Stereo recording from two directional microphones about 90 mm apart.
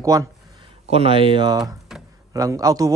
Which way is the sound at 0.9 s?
90° right.